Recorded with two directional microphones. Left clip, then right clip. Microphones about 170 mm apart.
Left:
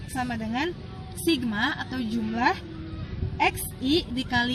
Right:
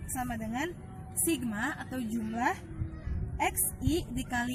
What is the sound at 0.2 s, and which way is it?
A woman's voice, 20° right (ahead or behind).